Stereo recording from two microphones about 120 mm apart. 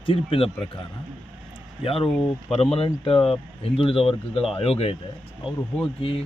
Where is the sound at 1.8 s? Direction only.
50° left (ahead or behind).